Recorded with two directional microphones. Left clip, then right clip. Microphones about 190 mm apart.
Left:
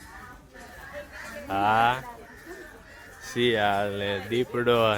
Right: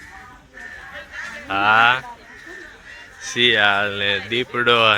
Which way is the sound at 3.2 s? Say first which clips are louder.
Right 8 dB; 15° left (ahead or behind).